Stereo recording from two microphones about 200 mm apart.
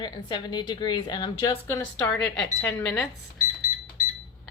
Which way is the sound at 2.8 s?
5° left (ahead or behind).